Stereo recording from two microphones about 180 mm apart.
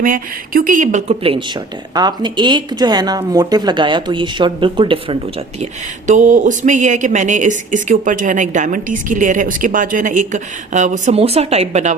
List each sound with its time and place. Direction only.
0.0 s speech: 50° right (ahead or behind); by 5.1 s 30° right (ahead or behind)
6.1 s speech: 45° right (ahead or behind)